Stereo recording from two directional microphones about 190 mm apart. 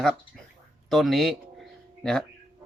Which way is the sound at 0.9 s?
Centre (ahead or behind).